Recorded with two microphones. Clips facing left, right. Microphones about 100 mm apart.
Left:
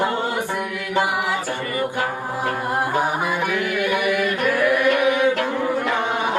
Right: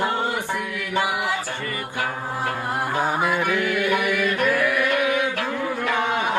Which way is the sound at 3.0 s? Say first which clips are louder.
Even; 15° left (ahead or behind).